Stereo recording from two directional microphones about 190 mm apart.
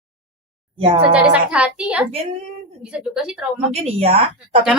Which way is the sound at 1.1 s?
5° right (ahead or behind).